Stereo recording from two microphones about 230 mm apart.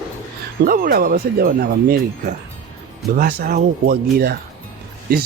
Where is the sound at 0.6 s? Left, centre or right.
Right.